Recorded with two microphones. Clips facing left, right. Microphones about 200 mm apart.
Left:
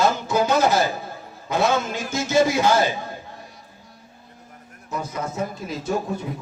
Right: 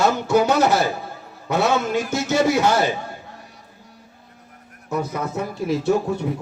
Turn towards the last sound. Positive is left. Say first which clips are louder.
# right 5 dB
turn(degrees=-70)  # may be behind; listen again after turning